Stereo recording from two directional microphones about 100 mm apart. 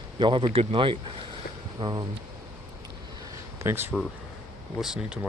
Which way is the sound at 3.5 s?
25° right (ahead or behind).